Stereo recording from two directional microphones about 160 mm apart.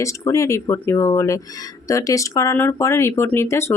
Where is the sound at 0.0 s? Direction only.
20° left (ahead or behind).